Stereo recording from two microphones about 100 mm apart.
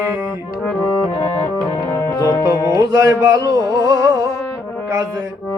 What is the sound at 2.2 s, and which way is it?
Music, 35° left (ahead or behind).